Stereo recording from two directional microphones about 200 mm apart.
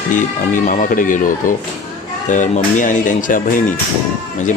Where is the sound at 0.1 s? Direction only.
40° left (ahead or behind).